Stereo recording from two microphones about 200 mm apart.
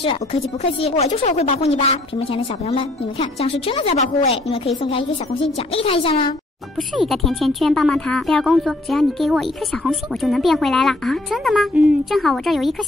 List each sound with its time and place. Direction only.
0.0 s speech: 30° left (ahead or behind)
5.7 s speech: 30° left (ahead or behind)
7.1 s speech: centre (ahead or behind)